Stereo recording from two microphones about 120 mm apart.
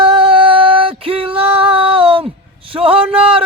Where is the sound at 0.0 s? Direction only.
50° right (ahead or behind).